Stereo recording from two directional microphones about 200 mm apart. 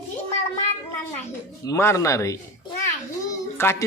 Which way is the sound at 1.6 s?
15° left (ahead or behind).